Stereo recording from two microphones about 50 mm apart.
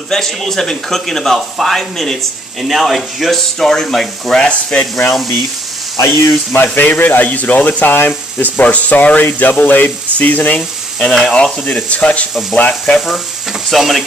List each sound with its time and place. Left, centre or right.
0.1 s speech: centre
4.5 s speech: left
5.9 s speech: left
6.5 s speech: left
8.4 s speech: left
9.2 s speech: left
11.1 s speech: centre
11.3 s speech: centre
13.7 s speech: centre